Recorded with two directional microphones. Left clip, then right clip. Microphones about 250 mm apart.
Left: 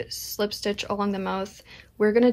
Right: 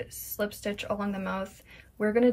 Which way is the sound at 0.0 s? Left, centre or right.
Centre.